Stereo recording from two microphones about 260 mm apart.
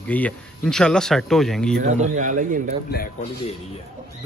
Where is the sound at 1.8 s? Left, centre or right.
Right.